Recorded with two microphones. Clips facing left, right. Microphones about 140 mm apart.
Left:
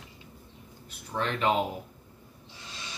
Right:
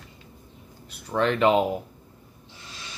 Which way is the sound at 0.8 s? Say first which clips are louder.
Right 8 dB; 70° right (ahead or behind).